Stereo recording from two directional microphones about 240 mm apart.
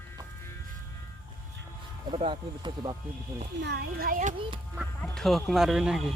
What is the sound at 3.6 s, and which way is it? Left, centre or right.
Speech, right.